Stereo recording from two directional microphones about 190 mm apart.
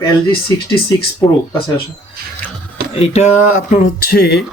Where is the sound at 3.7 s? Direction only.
50° left (ahead or behind).